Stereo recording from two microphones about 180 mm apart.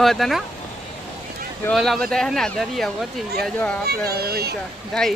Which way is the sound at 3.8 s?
60° right (ahead or behind).